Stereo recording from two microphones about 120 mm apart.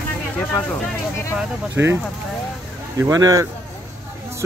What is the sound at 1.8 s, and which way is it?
Speech, 15° right (ahead or behind).